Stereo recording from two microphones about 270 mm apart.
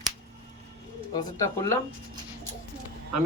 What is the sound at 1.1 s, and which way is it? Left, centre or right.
Speech, centre.